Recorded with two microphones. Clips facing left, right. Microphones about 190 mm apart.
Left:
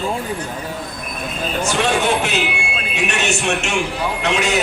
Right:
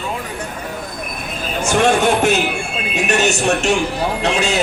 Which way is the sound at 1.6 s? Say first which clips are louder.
Right 5 dB; 50° right (ahead or behind).